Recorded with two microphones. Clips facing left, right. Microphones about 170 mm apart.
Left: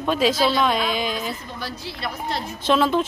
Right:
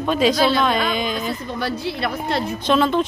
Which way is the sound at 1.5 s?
60° right (ahead or behind).